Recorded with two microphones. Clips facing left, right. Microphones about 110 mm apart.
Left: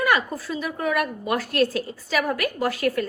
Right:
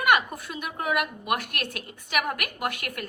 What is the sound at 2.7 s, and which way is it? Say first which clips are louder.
Speech: left 12 dB; 30° left (ahead or behind).